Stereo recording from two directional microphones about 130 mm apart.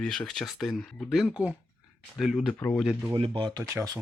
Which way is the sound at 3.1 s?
45° right (ahead or behind).